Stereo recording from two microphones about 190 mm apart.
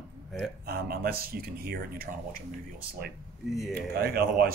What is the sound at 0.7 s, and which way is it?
Speech, 55° right (ahead or behind).